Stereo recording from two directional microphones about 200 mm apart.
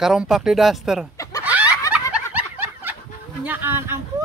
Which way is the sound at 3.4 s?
10° right (ahead or behind).